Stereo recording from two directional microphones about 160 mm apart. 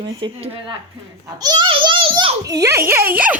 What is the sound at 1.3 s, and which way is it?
A child's voice, 25° right (ahead or behind).